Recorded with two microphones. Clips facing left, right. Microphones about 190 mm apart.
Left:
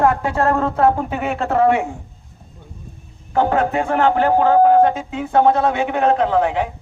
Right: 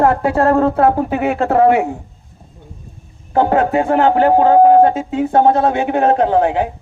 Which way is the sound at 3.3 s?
40° right (ahead or behind).